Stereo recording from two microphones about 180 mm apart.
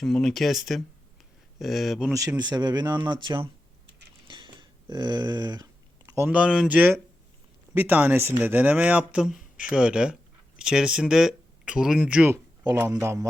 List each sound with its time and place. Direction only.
0.0 s speech: 5° left (ahead or behind)
2.4 s speech: 25° right (ahead or behind)
4.3 s a sound: 25° right (ahead or behind)
6.1 s speech: 10° right (ahead or behind)
12.6 s speech: 20° right (ahead or behind)